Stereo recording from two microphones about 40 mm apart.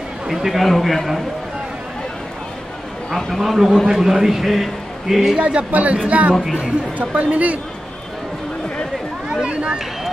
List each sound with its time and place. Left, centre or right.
0.3 s a man's voice: centre
0.7 s a man's voice: centre
3.1 s a man's voice: centre
3.3 s a man's voice: centre
5.4 s speech: right
9.5 s speech: right